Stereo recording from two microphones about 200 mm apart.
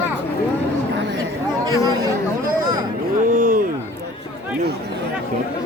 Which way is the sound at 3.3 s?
45° right (ahead or behind).